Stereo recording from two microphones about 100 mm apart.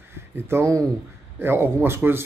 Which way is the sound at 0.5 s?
30° right (ahead or behind).